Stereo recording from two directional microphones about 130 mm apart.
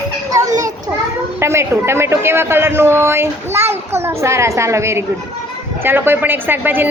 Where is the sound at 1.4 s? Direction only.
20° right (ahead or behind).